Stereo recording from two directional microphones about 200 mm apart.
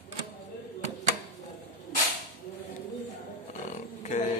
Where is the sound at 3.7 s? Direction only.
35° left (ahead or behind).